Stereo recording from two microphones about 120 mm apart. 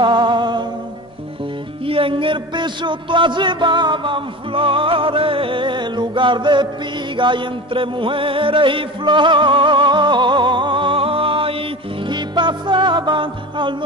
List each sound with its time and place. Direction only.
0.0 s music: 40° right (ahead or behind)
1.9 s a sound: 50° right (ahead or behind)
7.2 s music: 40° right (ahead or behind)